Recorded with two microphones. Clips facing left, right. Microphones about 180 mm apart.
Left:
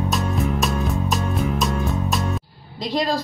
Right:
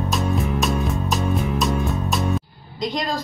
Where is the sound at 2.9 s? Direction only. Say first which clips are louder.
Left 4 dB; 35° left (ahead or behind).